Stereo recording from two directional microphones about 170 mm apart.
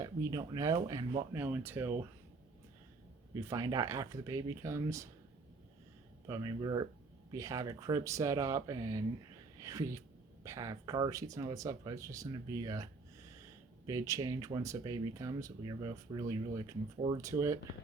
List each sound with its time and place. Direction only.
0.0 s speech: 20° right (ahead or behind)
3.3 s speech: 20° right (ahead or behind)
6.2 s speech: 20° right (ahead or behind)